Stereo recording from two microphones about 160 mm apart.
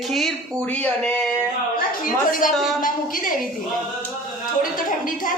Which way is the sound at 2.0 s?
60° left (ahead or behind).